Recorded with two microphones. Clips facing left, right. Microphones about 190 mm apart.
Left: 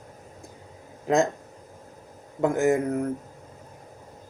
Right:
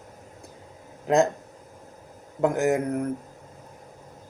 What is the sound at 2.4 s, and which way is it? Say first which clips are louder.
Speech: left 1 dB; centre (ahead or behind).